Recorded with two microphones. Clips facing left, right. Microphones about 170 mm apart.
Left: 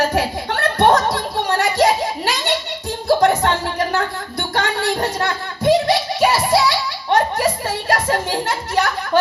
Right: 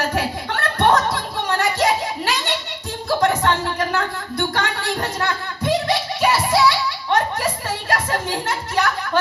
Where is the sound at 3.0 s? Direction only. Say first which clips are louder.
Left 3 dB; 35° left (ahead or behind).